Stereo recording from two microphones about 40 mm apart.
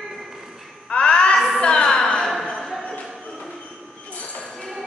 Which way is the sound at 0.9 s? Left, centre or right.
Left.